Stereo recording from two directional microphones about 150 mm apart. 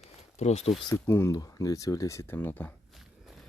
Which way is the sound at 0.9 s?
20° left (ahead or behind).